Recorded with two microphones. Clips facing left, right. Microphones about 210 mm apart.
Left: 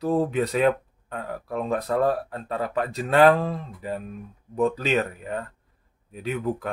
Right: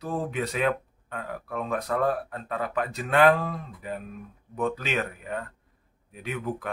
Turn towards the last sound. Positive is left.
turn(degrees=35)  # may be behind; listen again after turning